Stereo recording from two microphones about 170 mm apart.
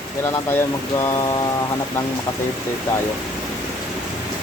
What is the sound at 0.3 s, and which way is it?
Speech, 15° left (ahead or behind).